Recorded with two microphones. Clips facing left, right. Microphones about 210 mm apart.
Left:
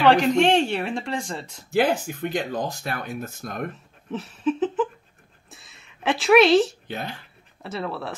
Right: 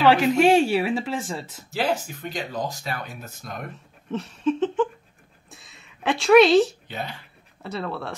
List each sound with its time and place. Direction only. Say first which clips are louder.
0.0 s speech: even; 5° right (ahead or behind)
2.3 s speech: left 1 dB; 50° left (ahead or behind)
4.1 s a sound: right 1 dB; centre (ahead or behind)
6.9 s speech: left 1 dB; 50° left (ahead or behind)
7.6 s speech: even; centre (ahead or behind)